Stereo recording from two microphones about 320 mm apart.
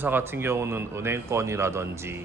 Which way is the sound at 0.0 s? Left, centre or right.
Centre.